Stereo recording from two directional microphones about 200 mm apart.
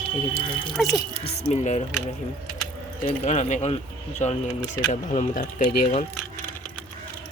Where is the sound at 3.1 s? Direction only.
35° left (ahead or behind).